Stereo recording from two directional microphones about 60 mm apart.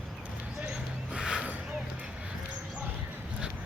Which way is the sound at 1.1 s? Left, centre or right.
Centre.